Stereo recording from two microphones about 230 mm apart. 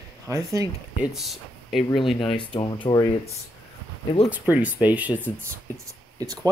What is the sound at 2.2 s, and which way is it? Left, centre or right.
Speech, left.